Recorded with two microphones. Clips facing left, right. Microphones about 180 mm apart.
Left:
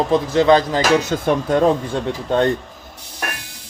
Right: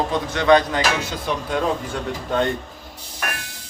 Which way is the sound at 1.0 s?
45° left (ahead or behind).